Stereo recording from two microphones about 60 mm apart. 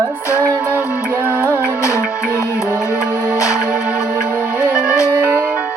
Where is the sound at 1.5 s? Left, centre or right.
Left.